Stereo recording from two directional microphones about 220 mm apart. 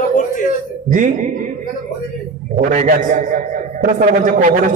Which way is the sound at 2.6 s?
35° right (ahead or behind).